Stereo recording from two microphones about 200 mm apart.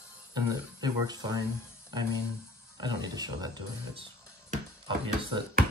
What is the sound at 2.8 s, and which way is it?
Speech, 20° right (ahead or behind).